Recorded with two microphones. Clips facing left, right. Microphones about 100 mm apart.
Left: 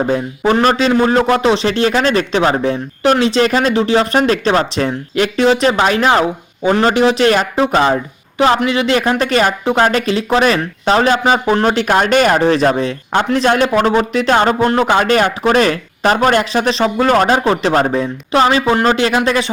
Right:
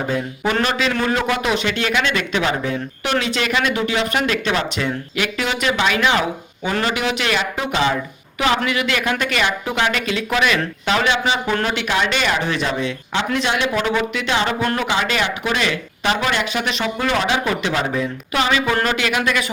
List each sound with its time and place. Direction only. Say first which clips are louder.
0.6 s a man's voice: left 9 dB; 35° left (ahead or behind)
14.6 s a man's voice: left 8 dB; 35° left (ahead or behind)
14.8 s a man's voice: left 8 dB; 45° left (ahead or behind)